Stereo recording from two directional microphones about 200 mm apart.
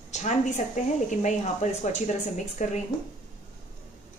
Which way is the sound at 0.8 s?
35° left (ahead or behind).